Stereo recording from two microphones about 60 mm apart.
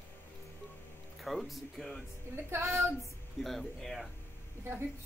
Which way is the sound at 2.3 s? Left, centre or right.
Right.